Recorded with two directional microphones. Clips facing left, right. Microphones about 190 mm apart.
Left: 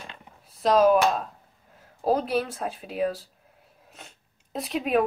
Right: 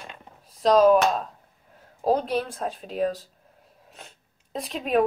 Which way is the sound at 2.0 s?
5° left (ahead or behind).